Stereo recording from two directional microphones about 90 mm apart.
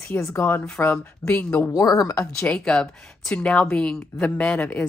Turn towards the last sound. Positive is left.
turn(degrees=10)  # may be behind; listen again after turning